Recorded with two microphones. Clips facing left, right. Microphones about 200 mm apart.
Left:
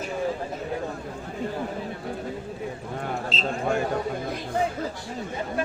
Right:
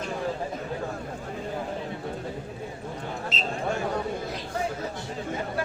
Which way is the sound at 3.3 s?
20° right (ahead or behind).